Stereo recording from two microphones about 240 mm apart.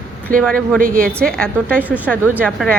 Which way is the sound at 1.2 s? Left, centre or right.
Centre.